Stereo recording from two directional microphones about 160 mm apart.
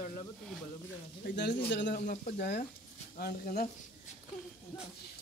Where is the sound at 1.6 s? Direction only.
90° left.